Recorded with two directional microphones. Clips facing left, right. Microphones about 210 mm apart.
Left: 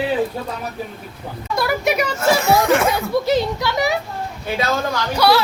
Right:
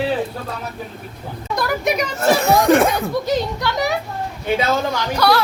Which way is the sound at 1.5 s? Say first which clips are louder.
Left 1 dB; 5° left (ahead or behind).